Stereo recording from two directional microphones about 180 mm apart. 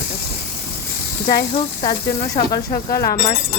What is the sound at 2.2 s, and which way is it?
Speech, 50° left (ahead or behind).